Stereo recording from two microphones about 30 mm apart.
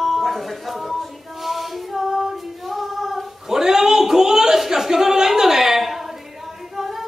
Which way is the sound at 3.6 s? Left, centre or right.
Centre.